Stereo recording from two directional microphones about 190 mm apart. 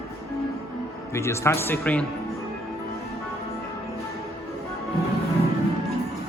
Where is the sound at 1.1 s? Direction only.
15° left (ahead or behind).